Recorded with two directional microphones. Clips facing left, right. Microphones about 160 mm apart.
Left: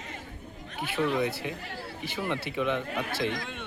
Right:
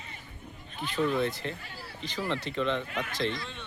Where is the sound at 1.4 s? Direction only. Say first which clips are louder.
Left 2 dB; 10° left (ahead or behind).